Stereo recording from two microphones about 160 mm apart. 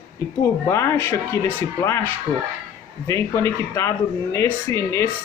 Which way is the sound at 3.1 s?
15° left (ahead or behind).